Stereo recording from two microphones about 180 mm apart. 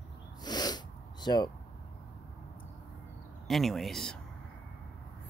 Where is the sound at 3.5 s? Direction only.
Centre (ahead or behind).